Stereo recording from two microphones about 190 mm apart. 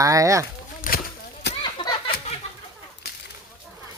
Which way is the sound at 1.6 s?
25° left (ahead or behind).